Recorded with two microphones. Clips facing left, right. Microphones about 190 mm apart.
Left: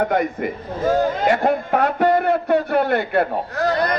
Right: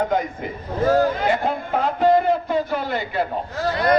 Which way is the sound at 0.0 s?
65° left (ahead or behind).